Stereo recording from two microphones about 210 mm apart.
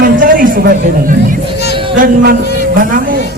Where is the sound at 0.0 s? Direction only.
40° right (ahead or behind).